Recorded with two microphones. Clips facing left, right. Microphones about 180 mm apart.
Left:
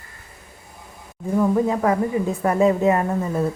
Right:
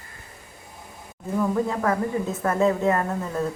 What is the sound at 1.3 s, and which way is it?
Speech, 15° left (ahead or behind).